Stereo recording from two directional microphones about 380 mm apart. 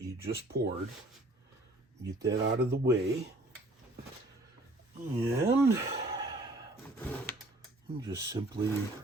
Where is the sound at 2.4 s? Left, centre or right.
Right.